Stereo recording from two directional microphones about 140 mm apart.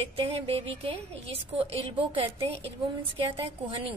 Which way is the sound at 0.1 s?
45° right (ahead or behind).